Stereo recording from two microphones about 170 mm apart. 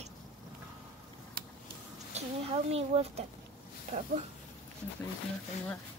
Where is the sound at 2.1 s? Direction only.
40° right (ahead or behind).